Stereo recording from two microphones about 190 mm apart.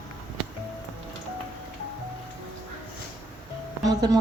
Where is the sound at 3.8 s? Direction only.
20° right (ahead or behind).